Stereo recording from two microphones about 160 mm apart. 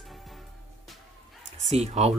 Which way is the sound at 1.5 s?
45° right (ahead or behind).